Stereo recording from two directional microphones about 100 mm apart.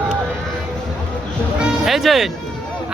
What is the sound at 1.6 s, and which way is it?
Speech, centre (ahead or behind).